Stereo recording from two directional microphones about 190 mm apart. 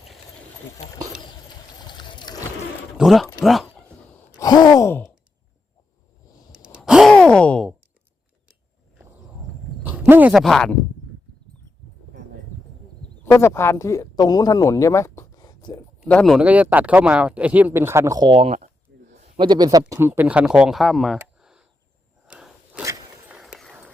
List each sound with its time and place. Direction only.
1.9 s splash: 25° left (ahead or behind)
3.0 s speech: centre (ahead or behind)
4.4 s sigh: 20° left (ahead or behind)
6.7 s gasp: 5° right (ahead or behind)
9.9 s speech: 10° right (ahead or behind)
13.0 s speech: 15° left (ahead or behind)
16.0 s speech: 5° left (ahead or behind); by 18.5 s 25° right (ahead or behind)
18.5 s a sound: 40° right (ahead or behind)
19.4 s speech: 20° right (ahead or behind); by 21.2 s centre (ahead or behind)
21.3 s a sound: 5° right (ahead or behind)
22.8 s a sound: 15° right (ahead or behind)
23.4 s a sound: centre (ahead or behind)